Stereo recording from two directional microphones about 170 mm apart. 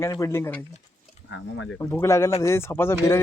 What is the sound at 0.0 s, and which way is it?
Speech, 15° left (ahead or behind).